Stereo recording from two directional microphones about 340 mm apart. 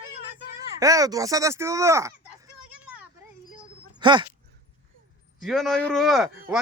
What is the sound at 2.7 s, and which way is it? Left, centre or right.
Children playing, centre.